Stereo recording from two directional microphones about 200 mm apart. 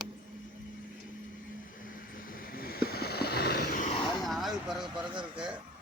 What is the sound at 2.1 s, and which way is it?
Vehicle, 45° left (ahead or behind).